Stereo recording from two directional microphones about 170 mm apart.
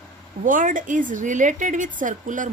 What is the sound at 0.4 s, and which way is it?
Speech, 50° right (ahead or behind).